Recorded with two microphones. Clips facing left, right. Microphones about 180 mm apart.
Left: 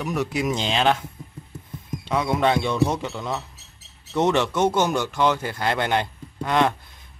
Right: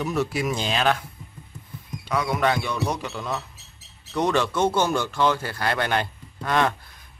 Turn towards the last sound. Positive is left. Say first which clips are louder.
# left 2 dB
turn(degrees=20)  # may be behind; listen again after turning